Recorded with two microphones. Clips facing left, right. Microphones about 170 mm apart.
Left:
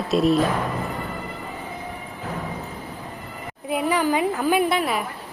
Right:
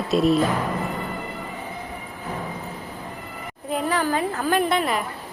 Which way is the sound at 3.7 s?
10° left (ahead or behind).